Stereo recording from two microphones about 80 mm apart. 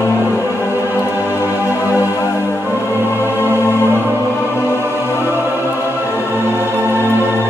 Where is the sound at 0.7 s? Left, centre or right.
Right.